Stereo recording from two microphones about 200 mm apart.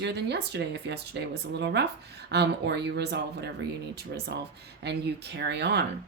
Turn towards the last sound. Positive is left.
turn(degrees=-55)  # may be behind; listen again after turning